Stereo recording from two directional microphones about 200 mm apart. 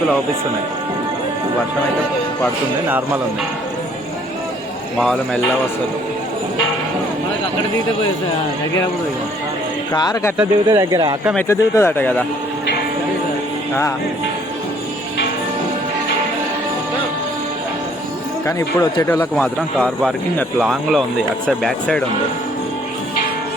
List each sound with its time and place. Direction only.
4.9 s speech: centre (ahead or behind)
9.9 s speech: 20° left (ahead or behind)
10.3 s speech: 15° right (ahead or behind)
11.3 s a man's voice: 15° left (ahead or behind)
18.4 s a man's voice: 15° left (ahead or behind)